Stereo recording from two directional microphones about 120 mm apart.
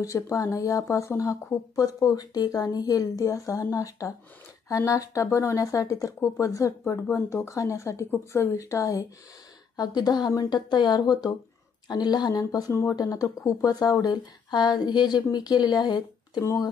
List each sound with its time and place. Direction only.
0.0 s a woman's voice: 25° left (ahead or behind)